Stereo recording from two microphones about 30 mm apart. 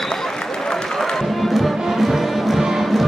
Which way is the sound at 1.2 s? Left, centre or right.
Centre.